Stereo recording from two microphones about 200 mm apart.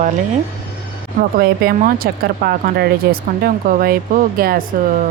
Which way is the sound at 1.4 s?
50° right (ahead or behind).